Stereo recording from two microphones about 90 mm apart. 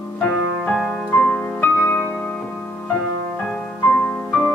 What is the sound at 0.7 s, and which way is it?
Music, 5° left (ahead or behind).